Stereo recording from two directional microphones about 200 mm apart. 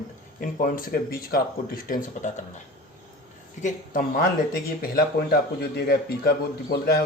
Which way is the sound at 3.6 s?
40° left (ahead or behind).